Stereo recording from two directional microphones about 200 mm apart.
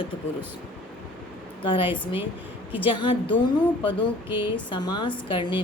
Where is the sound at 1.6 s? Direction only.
25° left (ahead or behind).